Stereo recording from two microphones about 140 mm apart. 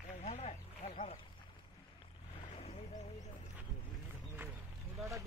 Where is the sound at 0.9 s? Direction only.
40° left (ahead or behind).